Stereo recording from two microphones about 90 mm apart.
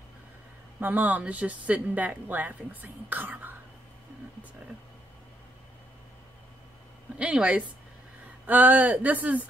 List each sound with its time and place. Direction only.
0.7 s speech: 20° right (ahead or behind)
7.2 s speech: 15° right (ahead or behind)